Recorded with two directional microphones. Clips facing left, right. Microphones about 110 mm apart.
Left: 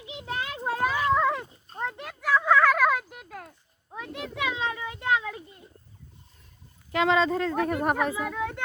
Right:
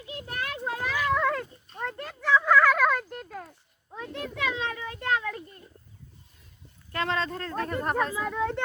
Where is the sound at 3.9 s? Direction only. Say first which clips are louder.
Even; 15° left (ahead or behind).